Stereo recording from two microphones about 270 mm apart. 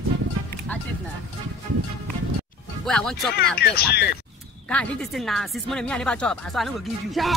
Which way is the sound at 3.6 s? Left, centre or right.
Left.